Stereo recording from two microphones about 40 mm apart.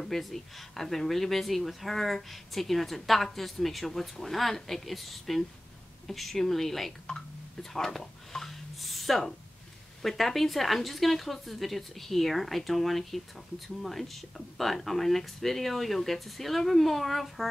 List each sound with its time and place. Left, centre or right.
0.0 s speech: centre
7.1 s speech: left
7.7 s a sound: centre
10.0 s speech: centre